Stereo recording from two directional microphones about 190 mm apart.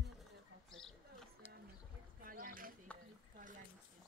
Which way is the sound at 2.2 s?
45° right (ahead or behind).